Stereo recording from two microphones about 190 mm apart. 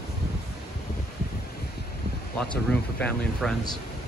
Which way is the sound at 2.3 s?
5° left (ahead or behind).